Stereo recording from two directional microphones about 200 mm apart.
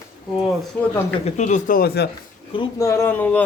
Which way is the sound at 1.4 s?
40° left (ahead or behind).